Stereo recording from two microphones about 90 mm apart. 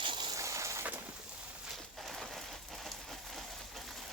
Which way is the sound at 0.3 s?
35° right (ahead or behind).